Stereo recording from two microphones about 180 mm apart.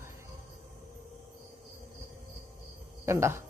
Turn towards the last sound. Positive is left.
turn(degrees=-15)  # may be behind; listen again after turning